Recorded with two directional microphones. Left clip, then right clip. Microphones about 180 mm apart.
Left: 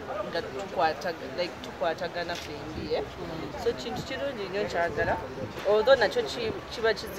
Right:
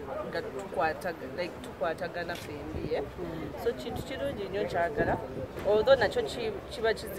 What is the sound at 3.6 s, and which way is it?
Speech, 10° right (ahead or behind).